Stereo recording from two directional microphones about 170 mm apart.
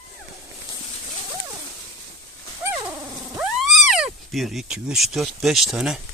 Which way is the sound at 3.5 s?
Centre (ahead or behind).